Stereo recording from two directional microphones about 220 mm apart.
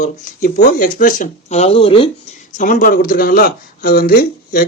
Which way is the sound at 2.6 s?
35° left (ahead or behind).